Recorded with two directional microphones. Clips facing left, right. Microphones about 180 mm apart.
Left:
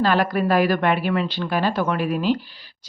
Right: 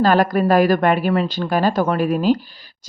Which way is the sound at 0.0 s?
45° right (ahead or behind).